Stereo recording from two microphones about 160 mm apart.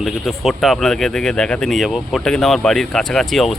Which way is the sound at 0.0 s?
Centre (ahead or behind).